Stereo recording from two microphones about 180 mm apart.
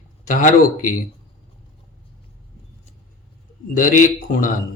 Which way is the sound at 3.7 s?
45° left (ahead or behind).